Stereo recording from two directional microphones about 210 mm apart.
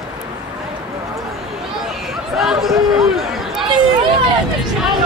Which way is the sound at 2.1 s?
Centre (ahead or behind).